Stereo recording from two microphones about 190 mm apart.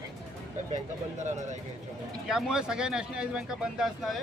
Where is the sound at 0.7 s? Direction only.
40° right (ahead or behind).